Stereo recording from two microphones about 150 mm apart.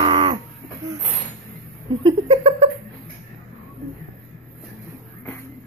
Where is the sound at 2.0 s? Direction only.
40° right (ahead or behind).